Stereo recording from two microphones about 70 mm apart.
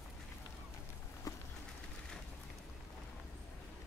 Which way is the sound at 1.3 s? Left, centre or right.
Left.